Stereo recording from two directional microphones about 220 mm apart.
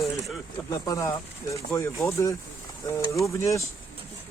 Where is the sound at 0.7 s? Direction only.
15° left (ahead or behind).